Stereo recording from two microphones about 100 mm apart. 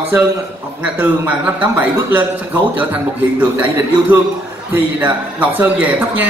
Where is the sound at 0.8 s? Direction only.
15° right (ahead or behind).